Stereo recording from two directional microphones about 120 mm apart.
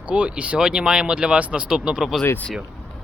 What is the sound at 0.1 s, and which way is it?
Speech, 10° right (ahead or behind).